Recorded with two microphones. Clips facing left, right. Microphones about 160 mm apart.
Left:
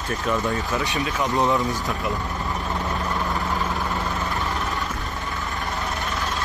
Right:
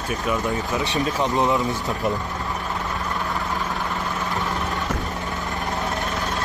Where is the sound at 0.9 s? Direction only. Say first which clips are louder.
Right 3 dB; 40° right (ahead or behind).